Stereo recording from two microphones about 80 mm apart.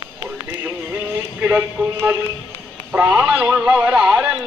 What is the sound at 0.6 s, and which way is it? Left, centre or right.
Music, right.